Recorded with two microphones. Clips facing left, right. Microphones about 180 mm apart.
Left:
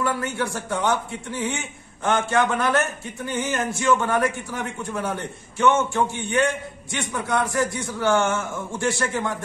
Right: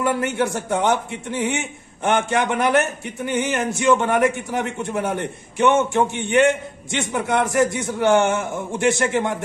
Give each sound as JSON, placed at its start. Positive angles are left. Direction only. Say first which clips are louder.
{"t": 0.0, "sound": "a man's voice", "louder": "right 4 dB", "side_deg": -20}